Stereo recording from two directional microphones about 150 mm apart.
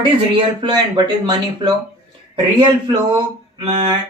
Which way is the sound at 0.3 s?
30° right (ahead or behind).